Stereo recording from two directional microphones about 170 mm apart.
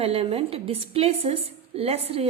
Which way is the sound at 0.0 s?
35° right (ahead or behind).